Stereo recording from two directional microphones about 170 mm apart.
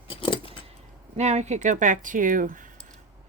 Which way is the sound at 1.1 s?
40° right (ahead or behind).